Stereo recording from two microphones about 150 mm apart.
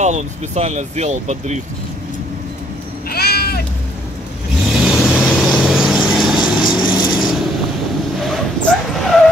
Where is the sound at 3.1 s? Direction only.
90° left.